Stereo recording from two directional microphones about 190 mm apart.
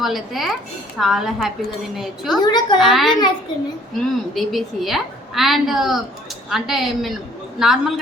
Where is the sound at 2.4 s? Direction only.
20° left (ahead or behind).